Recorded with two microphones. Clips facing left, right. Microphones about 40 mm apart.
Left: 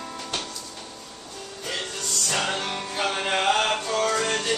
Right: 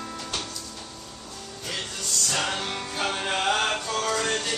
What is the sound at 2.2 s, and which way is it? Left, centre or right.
Music, centre.